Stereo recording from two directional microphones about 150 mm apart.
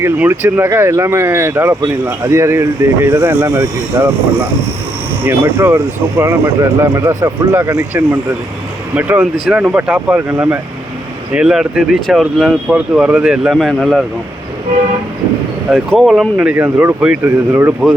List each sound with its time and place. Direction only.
0.0 s speech: 15° right (ahead or behind)
5.2 s speech: 15° right (ahead or behind); by 14.0 s centre (ahead or behind)
15.7 s speech: centre (ahead or behind); by 17.7 s 15° right (ahead or behind)